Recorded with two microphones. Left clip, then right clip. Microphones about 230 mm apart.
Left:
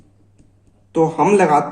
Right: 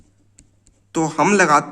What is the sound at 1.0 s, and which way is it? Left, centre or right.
Speech, right.